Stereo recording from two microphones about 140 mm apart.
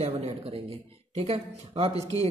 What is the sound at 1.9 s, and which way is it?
Speech, 25° left (ahead or behind).